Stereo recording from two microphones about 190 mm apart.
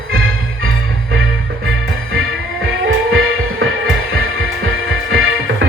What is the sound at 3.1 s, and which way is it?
Music, 90° right.